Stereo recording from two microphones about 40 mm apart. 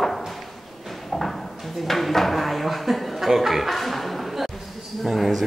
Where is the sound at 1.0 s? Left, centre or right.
Centre.